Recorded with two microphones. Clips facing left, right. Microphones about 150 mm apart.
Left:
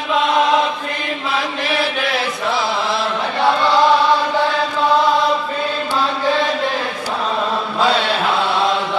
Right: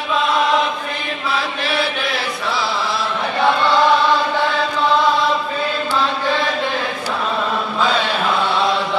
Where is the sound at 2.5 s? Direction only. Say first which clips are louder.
Left 1 dB; 20° left (ahead or behind).